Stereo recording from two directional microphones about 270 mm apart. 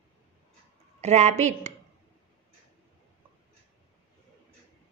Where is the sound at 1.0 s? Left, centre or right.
Right.